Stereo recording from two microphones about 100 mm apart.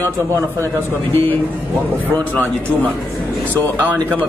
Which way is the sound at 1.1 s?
25° left (ahead or behind).